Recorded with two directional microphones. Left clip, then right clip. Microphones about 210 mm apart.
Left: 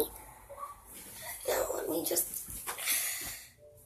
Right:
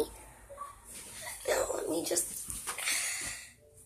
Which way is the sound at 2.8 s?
10° left (ahead or behind).